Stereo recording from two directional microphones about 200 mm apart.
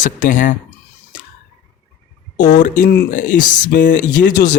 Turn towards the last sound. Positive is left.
turn(degrees=40)  # may be behind; listen again after turning